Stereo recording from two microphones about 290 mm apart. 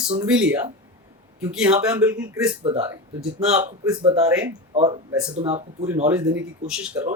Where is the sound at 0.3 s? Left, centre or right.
Centre.